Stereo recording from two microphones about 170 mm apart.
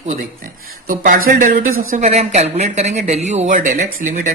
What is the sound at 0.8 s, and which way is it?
Speech, 55° right (ahead or behind).